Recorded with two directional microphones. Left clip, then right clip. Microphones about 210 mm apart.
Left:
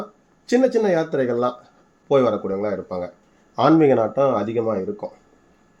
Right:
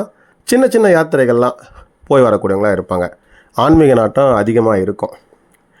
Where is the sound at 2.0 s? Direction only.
50° right (ahead or behind).